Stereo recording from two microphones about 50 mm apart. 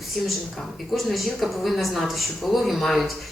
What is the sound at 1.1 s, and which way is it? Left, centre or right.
A woman's voice, centre.